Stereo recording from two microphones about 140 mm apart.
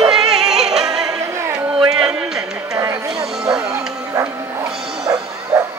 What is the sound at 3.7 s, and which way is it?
Bow-wow, 20° right (ahead or behind).